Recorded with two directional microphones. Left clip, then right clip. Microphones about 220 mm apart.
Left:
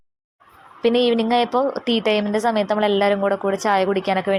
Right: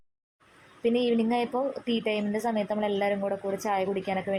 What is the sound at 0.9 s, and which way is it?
A woman's voice, 10° left (ahead or behind).